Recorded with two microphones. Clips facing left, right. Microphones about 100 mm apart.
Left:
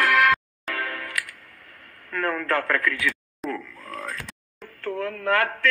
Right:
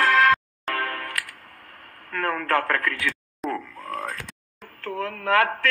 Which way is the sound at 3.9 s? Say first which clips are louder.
Right 3 dB; 25° right (ahead or behind).